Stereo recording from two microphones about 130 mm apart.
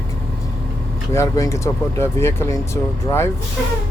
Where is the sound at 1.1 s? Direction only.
20° left (ahead or behind).